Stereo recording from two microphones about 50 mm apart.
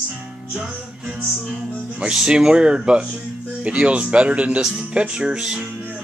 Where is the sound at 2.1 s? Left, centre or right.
Centre.